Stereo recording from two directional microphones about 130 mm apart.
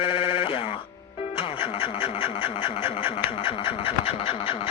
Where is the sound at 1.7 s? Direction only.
40° left (ahead or behind).